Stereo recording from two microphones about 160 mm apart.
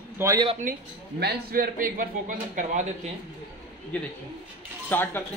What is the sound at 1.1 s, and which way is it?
A man's voice, 80° right.